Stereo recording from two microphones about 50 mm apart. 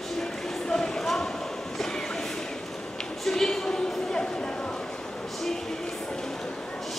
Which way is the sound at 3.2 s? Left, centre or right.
Centre.